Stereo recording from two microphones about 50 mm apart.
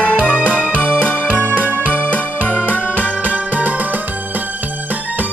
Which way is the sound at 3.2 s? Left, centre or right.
Right.